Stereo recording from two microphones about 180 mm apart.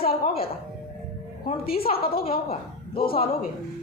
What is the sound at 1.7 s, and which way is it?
Speech, 30° left (ahead or behind).